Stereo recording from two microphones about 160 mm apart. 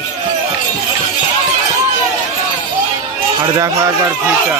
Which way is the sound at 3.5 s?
20° right (ahead or behind).